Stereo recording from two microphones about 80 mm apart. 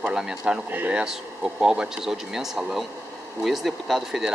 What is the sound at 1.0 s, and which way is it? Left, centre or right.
Speech, centre.